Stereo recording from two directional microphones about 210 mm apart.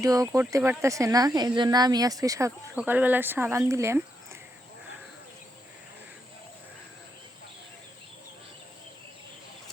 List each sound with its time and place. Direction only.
0.0 s speech: 15° right (ahead or behind)